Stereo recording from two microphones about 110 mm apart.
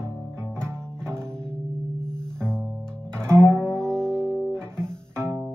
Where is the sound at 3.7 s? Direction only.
5° left (ahead or behind).